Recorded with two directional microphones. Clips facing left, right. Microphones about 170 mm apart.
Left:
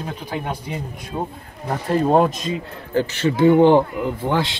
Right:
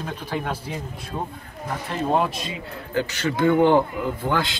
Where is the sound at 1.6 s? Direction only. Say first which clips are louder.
Left 7 dB; 40° left (ahead or behind).